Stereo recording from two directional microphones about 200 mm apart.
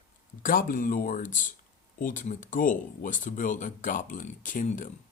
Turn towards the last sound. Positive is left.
turn(degrees=40)  # may be behind; listen again after turning